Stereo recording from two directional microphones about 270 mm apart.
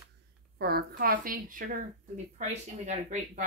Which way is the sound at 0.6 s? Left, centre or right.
Right.